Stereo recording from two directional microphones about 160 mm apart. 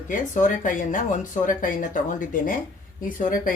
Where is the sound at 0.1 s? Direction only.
55° left (ahead or behind).